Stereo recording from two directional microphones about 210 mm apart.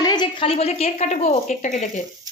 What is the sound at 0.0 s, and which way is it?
A woman's voice, 20° left (ahead or behind).